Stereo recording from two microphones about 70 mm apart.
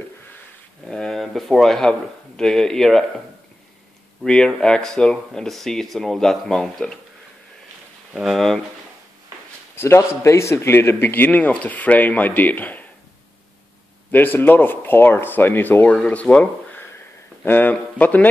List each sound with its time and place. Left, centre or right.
0.8 s speech: centre
4.2 s speech: centre
8.1 s speech: centre
9.8 s a man's voice: left
14.1 s a man's voice: left